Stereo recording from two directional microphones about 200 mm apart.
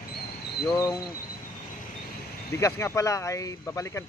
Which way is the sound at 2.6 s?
15° left (ahead or behind).